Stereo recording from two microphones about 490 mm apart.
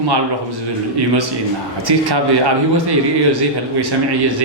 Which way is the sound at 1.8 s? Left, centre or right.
Right.